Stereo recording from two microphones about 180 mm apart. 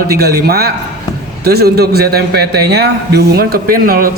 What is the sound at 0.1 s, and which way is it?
Speech, 60° right (ahead or behind).